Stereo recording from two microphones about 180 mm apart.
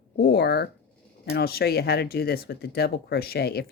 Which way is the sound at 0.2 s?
60° left (ahead or behind).